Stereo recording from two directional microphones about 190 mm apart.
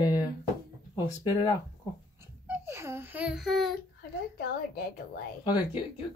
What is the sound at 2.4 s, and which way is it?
Speech, 10° right (ahead or behind).